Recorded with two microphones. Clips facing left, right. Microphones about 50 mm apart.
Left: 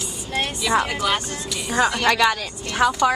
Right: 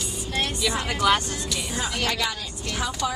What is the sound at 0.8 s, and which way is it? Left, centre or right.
Speech, centre.